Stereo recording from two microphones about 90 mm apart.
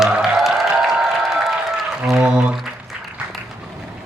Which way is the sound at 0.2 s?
5° right (ahead or behind).